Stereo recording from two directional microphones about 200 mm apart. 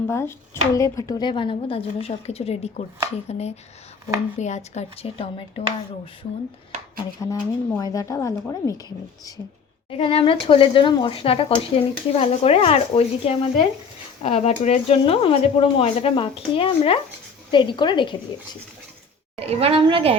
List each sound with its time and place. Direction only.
0.1 s a woman's voice: 15° left (ahead or behind); by 5.6 s 30° left (ahead or behind)
7.2 s a woman's voice: 15° left (ahead or behind)
9.9 s speech: 30° left (ahead or behind)
19.4 s a woman's voice: 30° right (ahead or behind)